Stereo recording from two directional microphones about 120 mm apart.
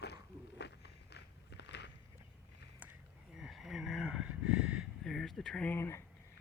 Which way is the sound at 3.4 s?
5° right (ahead or behind).